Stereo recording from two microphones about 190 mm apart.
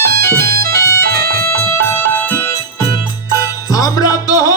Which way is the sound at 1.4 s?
10° left (ahead or behind).